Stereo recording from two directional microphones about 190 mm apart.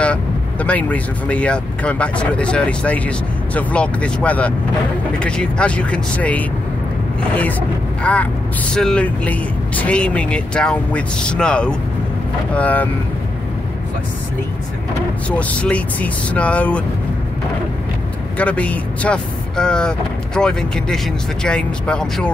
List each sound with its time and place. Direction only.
0.0 s speech: 5° left (ahead or behind)
8.0 s speech: 5° left (ahead or behind)
15.2 s speech: 5° left (ahead or behind)
18.4 s speech: 5° left (ahead or behind)